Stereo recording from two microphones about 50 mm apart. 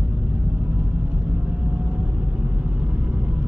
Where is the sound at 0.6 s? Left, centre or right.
Right.